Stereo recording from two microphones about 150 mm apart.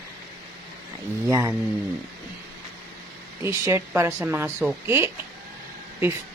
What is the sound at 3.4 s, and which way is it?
A woman's voice, 20° right (ahead or behind).